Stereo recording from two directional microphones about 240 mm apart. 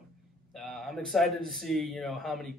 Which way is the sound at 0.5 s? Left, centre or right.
Centre.